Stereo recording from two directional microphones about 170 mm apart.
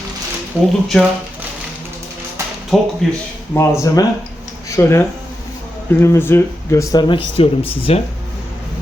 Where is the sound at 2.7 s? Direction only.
Centre (ahead or behind).